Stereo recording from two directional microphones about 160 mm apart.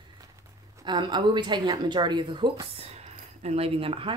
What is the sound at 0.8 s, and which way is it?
Speech, 30° right (ahead or behind).